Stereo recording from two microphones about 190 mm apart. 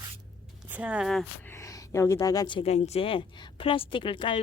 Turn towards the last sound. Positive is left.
turn(degrees=25)  # may be behind; listen again after turning